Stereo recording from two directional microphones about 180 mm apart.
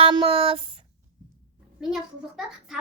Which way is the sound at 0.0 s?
30° right (ahead or behind).